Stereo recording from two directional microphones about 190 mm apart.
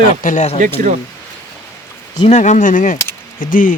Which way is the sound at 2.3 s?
40° left (ahead or behind).